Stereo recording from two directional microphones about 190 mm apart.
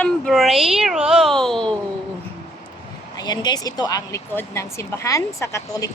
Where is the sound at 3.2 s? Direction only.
20° left (ahead or behind).